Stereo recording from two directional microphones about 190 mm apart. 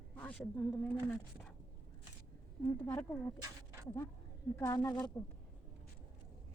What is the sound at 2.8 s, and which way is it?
Speech, 15° left (ahead or behind).